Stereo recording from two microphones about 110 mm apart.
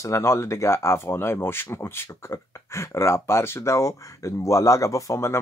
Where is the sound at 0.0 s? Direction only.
25° left (ahead or behind).